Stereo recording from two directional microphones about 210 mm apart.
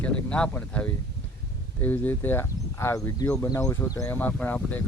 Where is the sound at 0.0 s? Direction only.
5° left (ahead or behind).